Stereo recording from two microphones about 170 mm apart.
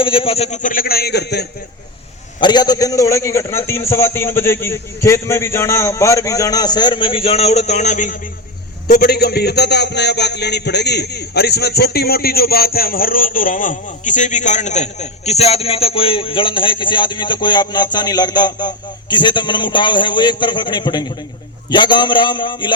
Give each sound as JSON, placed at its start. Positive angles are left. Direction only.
{"t": 0.0, "sound": "a man's voice", "side_deg": 30}
{"t": 2.4, "sound": "a man's voice", "side_deg": 25}
{"t": 8.9, "sound": "a man's voice", "side_deg": 70}